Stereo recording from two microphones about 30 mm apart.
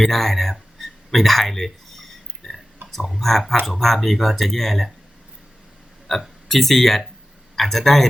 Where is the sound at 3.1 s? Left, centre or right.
Centre.